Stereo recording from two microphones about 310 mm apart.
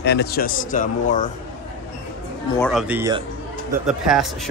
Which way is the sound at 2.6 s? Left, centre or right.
Centre.